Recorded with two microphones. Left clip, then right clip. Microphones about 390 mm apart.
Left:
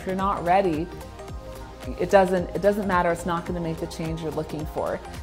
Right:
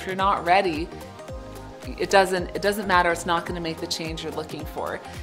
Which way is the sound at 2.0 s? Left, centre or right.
Left.